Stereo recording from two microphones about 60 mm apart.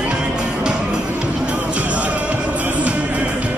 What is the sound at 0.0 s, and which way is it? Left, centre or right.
Music, centre.